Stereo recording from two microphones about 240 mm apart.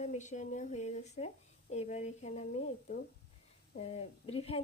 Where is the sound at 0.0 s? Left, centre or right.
Left.